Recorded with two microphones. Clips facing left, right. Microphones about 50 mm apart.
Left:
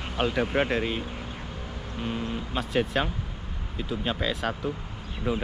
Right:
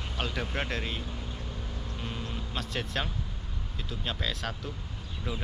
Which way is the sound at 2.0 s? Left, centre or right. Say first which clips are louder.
Left 8 dB; left.